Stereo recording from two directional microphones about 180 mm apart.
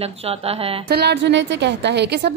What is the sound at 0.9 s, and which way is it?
A woman's voice, 65° right (ahead or behind).